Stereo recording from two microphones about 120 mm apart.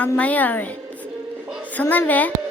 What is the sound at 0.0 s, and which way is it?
Speech, 10° left (ahead or behind).